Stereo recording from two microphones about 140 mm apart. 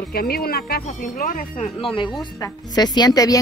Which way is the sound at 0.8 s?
70° left (ahead or behind).